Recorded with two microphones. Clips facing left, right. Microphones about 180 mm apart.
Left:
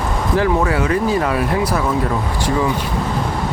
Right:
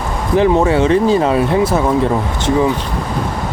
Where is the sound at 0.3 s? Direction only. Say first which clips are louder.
Right 6 dB; 25° right (ahead or behind).